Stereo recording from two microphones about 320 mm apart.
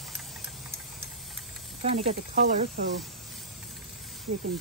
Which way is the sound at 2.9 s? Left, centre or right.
Centre.